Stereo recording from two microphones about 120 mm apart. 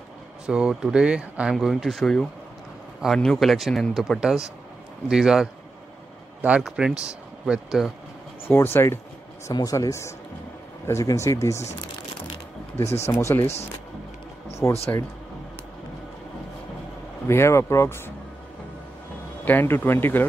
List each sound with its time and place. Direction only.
0.5 s speech: 5° right (ahead or behind)
8.5 s speech: 20° left (ahead or behind)
9.5 s speech: 30° left (ahead or behind)
13.0 s speech: 25° left (ahead or behind)
14.6 s speech: 25° left (ahead or behind)
17.3 s speech: 20° left (ahead or behind)
19.4 s speech: 15° left (ahead or behind)